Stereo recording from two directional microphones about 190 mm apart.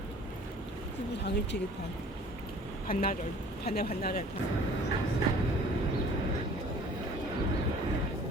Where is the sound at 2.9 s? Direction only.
50° left (ahead or behind).